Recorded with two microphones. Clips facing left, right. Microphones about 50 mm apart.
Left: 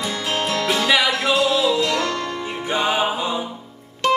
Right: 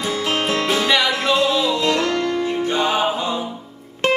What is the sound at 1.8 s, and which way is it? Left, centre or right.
Music, right.